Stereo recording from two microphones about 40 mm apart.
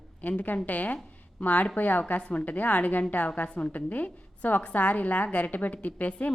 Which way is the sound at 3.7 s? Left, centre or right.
Left.